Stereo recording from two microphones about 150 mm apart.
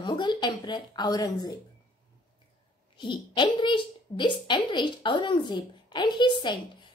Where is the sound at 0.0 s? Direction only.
30° left (ahead or behind).